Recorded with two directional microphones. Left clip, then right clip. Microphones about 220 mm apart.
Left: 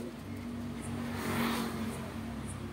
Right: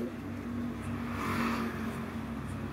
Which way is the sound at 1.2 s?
10° left (ahead or behind).